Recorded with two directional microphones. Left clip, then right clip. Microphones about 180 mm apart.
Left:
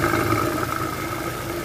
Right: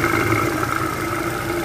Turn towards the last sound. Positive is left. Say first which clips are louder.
# right 2 dB
turn(degrees=20)  # may be behind; listen again after turning